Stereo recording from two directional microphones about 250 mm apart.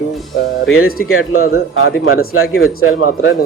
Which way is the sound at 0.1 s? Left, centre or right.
Centre.